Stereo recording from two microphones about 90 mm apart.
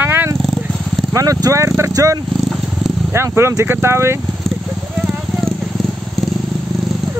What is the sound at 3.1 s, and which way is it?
Speech, 30° right (ahead or behind).